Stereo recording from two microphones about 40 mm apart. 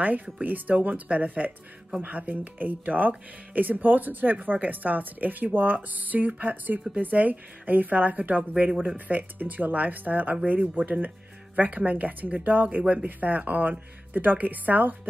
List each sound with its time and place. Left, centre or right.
0.0 s speech: right